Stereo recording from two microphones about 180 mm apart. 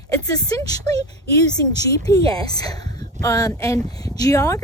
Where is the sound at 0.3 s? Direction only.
20° left (ahead or behind).